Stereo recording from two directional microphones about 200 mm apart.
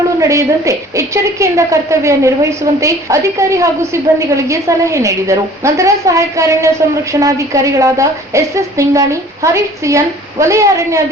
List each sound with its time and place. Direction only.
0.2 s a woman's voice: 15° right (ahead or behind)